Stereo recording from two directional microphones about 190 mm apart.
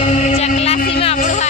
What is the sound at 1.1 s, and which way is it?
Music, 40° left (ahead or behind).